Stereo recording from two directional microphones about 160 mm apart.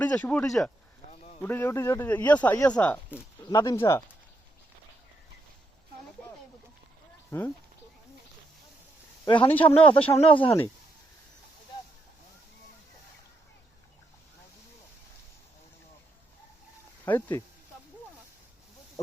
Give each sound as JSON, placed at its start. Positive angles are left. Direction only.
{"t": 0.0, "sound": "speech", "side_deg": 5}
{"t": 1.0, "sound": "a sound", "side_deg": -90}
{"t": 1.4, "sound": "speech", "side_deg": 10}
{"t": 2.6, "sound": "speech", "side_deg": 25}
{"t": 7.3, "sound": "speech", "side_deg": 15}
{"t": 9.2, "sound": "speech", "side_deg": 30}
{"t": 9.5, "sound": "speech", "side_deg": 10}
{"t": 10.0, "sound": "speech", "side_deg": 35}
{"t": 17.1, "sound": "speech", "side_deg": 15}